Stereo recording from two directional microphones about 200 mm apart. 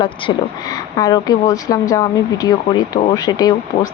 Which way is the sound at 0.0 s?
20° left (ahead or behind).